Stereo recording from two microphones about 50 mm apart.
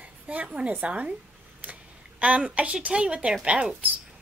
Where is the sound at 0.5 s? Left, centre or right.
Right.